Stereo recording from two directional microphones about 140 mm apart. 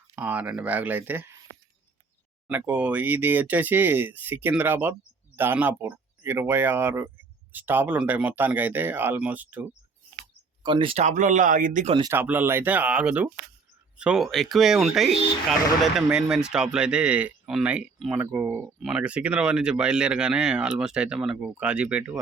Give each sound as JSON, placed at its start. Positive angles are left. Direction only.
{"t": 0.1, "sound": "speech", "side_deg": -10}
{"t": 2.5, "sound": "speech", "side_deg": -10}
{"t": 10.6, "sound": "speech", "side_deg": -35}
{"t": 10.9, "sound": "speech", "side_deg": -60}
{"t": 12.1, "sound": "speech", "side_deg": -15}
{"t": 18.8, "sound": "speech", "side_deg": -5}